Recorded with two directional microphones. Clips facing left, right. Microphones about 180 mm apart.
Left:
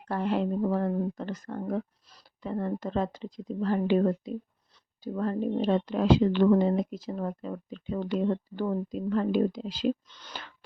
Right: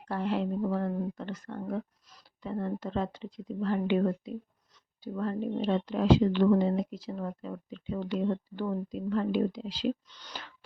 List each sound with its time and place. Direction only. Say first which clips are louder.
0.1 s speech: left 3 dB; 50° left (ahead or behind)
2.4 s a woman's voice: left 2 dB; 50° left (ahead or behind)